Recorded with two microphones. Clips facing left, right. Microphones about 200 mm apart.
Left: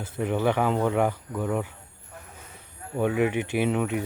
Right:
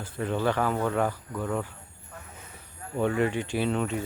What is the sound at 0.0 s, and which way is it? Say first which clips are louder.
Speech: left 2 dB; 15° left (ahead or behind).